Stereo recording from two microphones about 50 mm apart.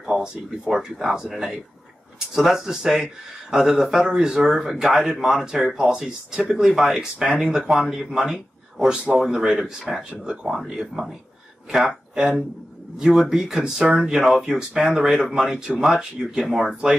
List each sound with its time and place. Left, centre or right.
0.0 s speech: centre
8.9 s speech: centre
9.9 s speech: centre
10.2 s speech: centre